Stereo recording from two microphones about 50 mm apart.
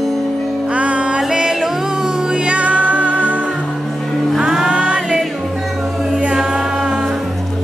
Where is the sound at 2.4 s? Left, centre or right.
Right.